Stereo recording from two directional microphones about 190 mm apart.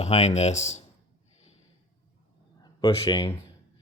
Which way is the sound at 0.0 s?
35° left (ahead or behind).